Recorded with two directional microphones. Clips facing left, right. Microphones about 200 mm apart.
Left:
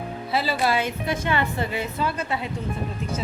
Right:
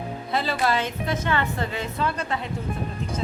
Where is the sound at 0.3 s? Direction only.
5° left (ahead or behind).